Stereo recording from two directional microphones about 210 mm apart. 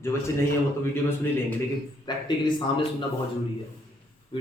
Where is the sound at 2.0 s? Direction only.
25° left (ahead or behind).